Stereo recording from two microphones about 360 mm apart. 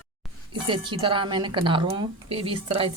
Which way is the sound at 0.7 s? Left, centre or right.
Centre.